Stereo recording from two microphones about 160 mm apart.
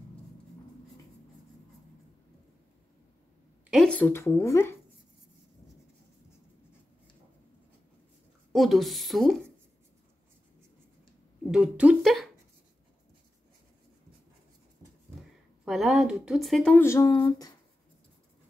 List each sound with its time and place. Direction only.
3.7 s speech: 5° left (ahead or behind)
8.5 s a woman's voice: centre (ahead or behind)
11.5 s a woman's voice: 5° right (ahead or behind)
15.6 s a woman's voice: centre (ahead or behind)
16.7 s speech: 15° left (ahead or behind)